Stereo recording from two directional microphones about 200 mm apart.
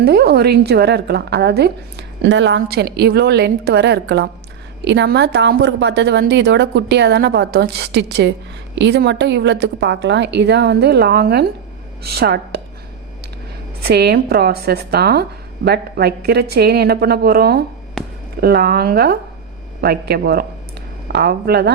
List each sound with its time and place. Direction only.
0.0 s a woman's voice: 55° right (ahead or behind)
13.8 s speech: 55° right (ahead or behind)
18.0 s a sound: centre (ahead or behind)
18.3 s speech: 50° right (ahead or behind)